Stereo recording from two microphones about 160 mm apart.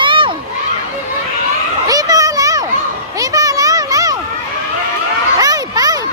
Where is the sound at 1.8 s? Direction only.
20° right (ahead or behind).